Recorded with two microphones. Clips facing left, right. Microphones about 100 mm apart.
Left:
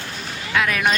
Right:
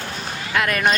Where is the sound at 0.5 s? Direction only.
Centre (ahead or behind).